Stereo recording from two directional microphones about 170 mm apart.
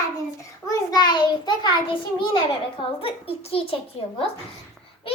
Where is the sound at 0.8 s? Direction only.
25° left (ahead or behind).